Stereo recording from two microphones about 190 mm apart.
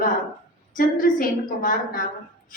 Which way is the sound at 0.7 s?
45° left (ahead or behind).